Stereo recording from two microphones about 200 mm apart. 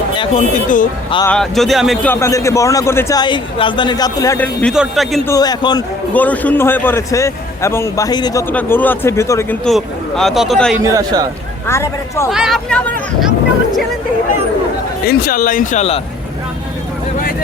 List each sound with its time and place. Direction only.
0.2 s speech: 35° left (ahead or behind)
1.3 s a man's voice: centre (ahead or behind)
4.6 s speech: centre (ahead or behind)
5.3 s a man's voice: 20° left (ahead or behind)
6.1 s a man's voice: 10° left (ahead or behind)
9.6 s speech: centre (ahead or behind)
10.8 s a man's voice: 20° right (ahead or behind)
11.7 s a man's voice: 15° left (ahead or behind)
12.3 s speech: centre (ahead or behind)
15.0 s speech: 50° left (ahead or behind)